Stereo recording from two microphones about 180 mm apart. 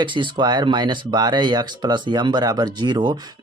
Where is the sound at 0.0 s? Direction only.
25° right (ahead or behind).